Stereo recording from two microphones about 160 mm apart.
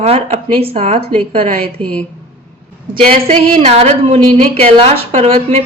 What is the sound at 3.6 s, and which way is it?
A woman's voice, 40° right (ahead or behind).